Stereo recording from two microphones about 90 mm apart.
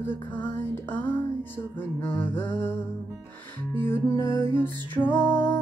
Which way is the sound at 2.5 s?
20° left (ahead or behind).